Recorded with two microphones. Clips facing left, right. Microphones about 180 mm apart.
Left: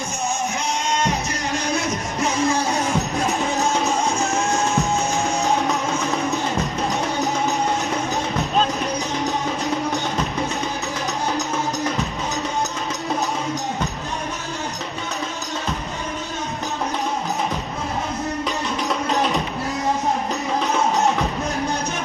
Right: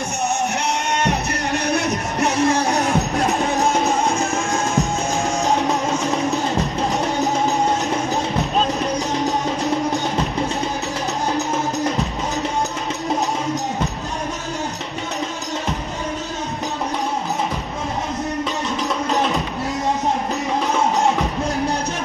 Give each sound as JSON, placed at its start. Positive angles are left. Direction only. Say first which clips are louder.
{"t": 0.9, "sound": "music", "louder": "right 2 dB", "side_deg": -65}